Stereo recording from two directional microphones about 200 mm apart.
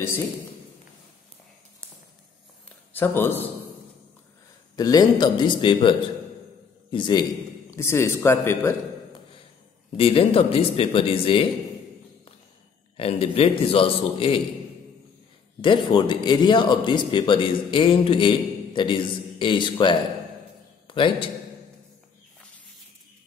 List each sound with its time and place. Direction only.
2.9 s a man's voice: 10° left (ahead or behind)
4.7 s a man's voice: 20° left (ahead or behind)
9.9 s a man's voice: 30° left (ahead or behind)
12.9 s a man's voice: 30° left (ahead or behind)
15.6 s a man's voice: 25° left (ahead or behind)